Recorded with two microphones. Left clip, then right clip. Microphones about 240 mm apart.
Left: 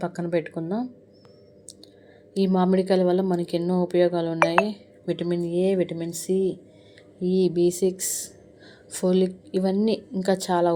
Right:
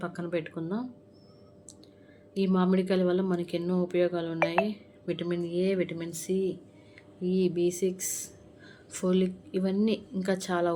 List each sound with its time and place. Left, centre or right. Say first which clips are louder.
0.0 s speech: left 7 dB; centre
2.3 s a woman's voice: left 6 dB; centre